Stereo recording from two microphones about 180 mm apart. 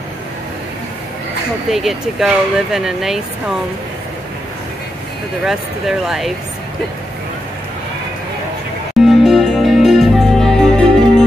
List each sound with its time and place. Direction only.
1.7 s speech: centre (ahead or behind)
5.4 s speech: centre (ahead or behind)
9.0 s music: centre (ahead or behind)